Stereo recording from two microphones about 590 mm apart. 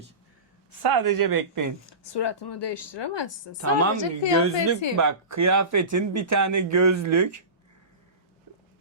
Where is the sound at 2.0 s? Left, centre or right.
Left.